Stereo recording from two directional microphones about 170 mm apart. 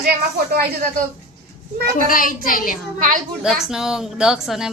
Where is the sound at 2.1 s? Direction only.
55° left (ahead or behind).